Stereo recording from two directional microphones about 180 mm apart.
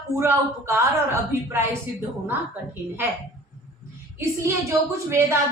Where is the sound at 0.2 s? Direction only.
15° right (ahead or behind).